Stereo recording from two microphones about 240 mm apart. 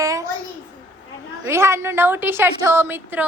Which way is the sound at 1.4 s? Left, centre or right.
Centre.